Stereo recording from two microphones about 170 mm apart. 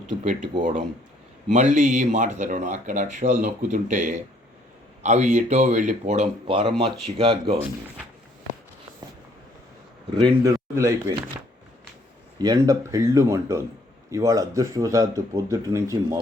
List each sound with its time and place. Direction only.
0.6 s speech: 50° right (ahead or behind); by 7.6 s 35° right (ahead or behind)
10.4 s speech: 20° right (ahead or behind)
12.4 s speech: 20° right (ahead or behind)